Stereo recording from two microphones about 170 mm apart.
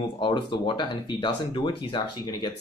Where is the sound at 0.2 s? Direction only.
25° left (ahead or behind).